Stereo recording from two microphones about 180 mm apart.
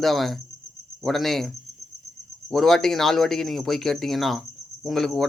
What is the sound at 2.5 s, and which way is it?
Speech, centre (ahead or behind).